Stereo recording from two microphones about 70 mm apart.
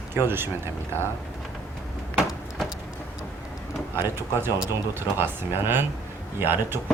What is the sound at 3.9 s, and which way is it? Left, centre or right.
Speech, right.